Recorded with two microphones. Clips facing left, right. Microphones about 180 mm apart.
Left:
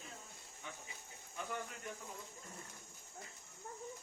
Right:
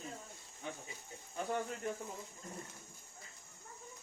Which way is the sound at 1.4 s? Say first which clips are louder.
Right 6 dB; 35° right (ahead or behind).